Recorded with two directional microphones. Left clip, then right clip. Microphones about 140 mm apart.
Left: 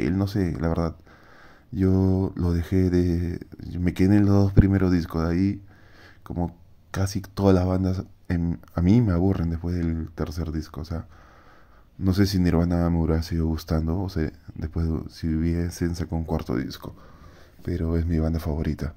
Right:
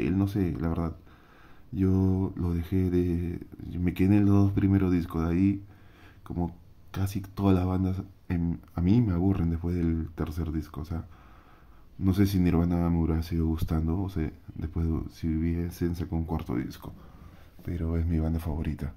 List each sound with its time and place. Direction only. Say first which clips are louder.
0.0 s speech: left 3 dB; 30° left (ahead or behind)
7.1 s speech: left 6 dB; 35° left (ahead or behind)
9.3 s speech: left 2 dB; 25° left (ahead or behind)
15.4 s speech: left 4 dB; 40° left (ahead or behind)